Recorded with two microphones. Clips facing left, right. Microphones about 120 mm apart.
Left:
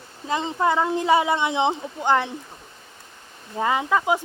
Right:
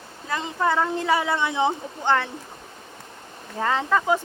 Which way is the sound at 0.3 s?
20° left (ahead or behind).